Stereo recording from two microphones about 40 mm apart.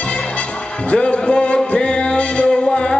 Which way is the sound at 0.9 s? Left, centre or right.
Left.